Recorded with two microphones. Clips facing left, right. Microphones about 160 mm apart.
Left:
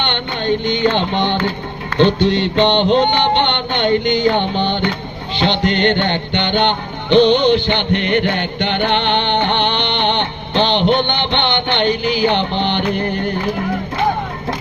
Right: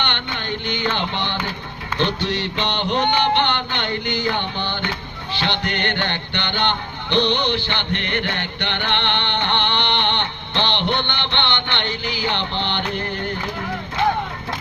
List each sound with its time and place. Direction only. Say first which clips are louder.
0.0 s carnatic music: left 6 dB; 20° left (ahead or behind)
2.2 s music: left 10 dB; 20° left (ahead or behind)